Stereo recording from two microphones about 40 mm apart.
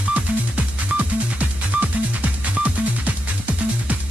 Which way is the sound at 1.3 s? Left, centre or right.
Right.